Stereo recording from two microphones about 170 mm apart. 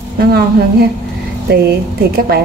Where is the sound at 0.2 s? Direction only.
70° right (ahead or behind).